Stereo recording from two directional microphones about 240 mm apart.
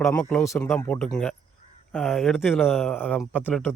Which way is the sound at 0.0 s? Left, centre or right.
Centre.